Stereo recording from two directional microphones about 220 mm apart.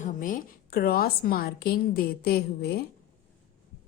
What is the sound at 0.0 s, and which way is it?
A woman's voice, 40° left (ahead or behind).